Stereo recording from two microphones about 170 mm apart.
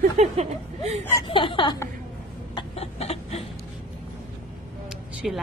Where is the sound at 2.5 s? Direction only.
35° left (ahead or behind).